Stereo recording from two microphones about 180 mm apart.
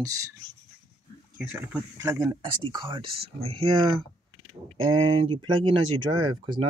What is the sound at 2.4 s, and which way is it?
Speech, 25° right (ahead or behind).